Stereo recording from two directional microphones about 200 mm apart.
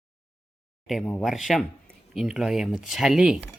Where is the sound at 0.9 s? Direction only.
Centre (ahead or behind).